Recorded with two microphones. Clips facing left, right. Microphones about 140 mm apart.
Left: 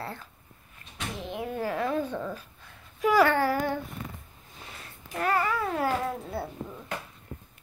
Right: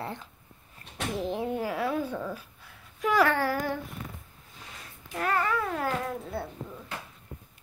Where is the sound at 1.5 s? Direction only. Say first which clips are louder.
Even; 10° right (ahead or behind).